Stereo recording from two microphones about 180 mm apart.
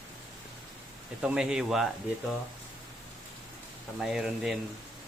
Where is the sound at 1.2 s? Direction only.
5° right (ahead or behind).